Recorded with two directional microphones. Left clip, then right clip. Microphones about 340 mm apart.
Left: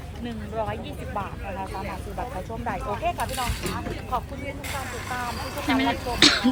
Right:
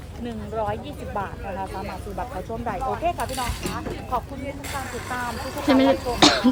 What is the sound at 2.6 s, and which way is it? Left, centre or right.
Speech, right.